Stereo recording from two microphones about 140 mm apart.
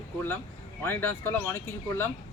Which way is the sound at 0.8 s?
15° left (ahead or behind).